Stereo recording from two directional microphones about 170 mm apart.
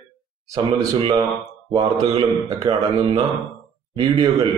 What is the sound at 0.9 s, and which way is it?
Speech, 30° right (ahead or behind).